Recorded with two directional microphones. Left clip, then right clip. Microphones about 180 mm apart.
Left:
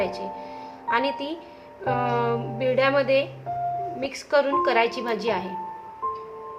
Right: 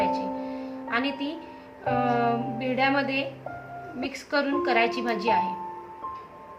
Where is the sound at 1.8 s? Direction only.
40° left (ahead or behind).